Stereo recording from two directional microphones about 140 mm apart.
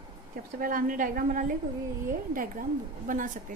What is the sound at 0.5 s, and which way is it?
A woman's voice, 85° right.